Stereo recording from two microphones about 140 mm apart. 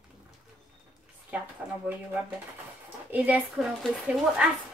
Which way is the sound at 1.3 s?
10° right (ahead or behind).